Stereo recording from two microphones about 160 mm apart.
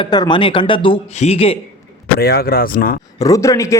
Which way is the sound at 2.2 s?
75° left (ahead or behind).